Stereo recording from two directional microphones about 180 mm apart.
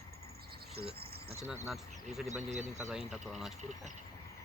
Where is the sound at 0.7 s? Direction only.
60° right (ahead or behind).